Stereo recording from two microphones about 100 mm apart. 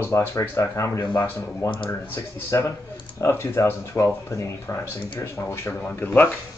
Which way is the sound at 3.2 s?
25° left (ahead or behind).